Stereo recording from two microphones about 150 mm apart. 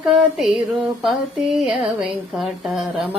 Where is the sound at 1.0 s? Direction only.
5° right (ahead or behind).